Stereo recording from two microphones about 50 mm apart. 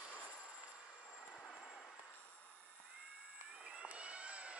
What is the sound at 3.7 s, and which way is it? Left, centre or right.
Vehicle, right.